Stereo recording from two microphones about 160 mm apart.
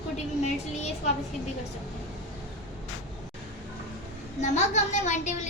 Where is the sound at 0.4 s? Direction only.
45° left (ahead or behind).